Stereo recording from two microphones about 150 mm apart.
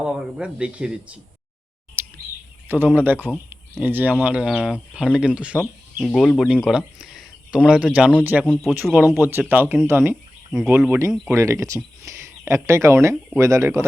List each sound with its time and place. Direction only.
0.0 s speech: 5° right (ahead or behind)
2.0 s bird vocalization: 15° right (ahead or behind)
2.6 s speech: 15° right (ahead or behind)
3.5 s a sound: 10° right (ahead or behind)
4.2 s speech: 10° right (ahead or behind)
8.4 s speech: 5° left (ahead or behind)
8.7 s speech: 10° right (ahead or behind)